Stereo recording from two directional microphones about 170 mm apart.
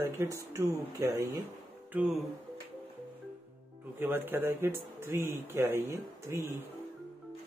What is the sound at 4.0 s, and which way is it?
Speech, 10° right (ahead or behind).